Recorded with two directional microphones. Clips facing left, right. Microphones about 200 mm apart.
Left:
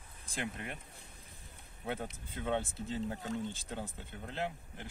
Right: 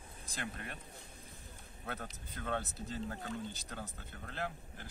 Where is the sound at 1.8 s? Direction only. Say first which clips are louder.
Left 5 dB; 20° left (ahead or behind).